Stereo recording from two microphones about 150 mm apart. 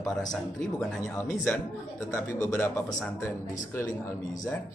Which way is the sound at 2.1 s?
15° left (ahead or behind).